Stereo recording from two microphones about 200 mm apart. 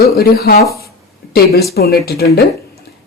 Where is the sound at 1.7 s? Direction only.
50° left (ahead or behind).